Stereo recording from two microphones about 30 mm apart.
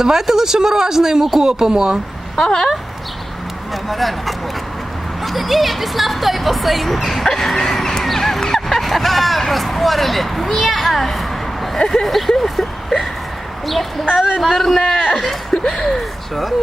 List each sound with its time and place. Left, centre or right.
0.0 s speech: centre
2.4 s speech: left
3.8 s speech: centre
7.6 s a sound: centre
9.5 s speech: centre
14.4 s speech: centre